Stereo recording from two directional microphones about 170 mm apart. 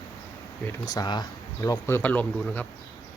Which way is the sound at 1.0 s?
25° left (ahead or behind).